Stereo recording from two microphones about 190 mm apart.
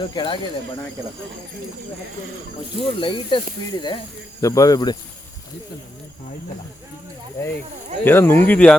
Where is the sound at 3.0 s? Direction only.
25° left (ahead or behind).